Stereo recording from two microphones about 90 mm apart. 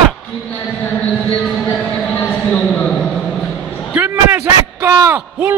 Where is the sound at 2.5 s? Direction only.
10° left (ahead or behind).